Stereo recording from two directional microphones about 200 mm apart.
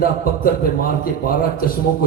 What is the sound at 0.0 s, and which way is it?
A man's voice, 45° left (ahead or behind).